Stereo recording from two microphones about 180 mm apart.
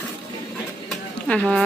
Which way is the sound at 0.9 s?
5° left (ahead or behind).